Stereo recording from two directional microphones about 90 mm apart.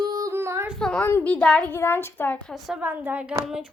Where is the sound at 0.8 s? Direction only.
10° left (ahead or behind).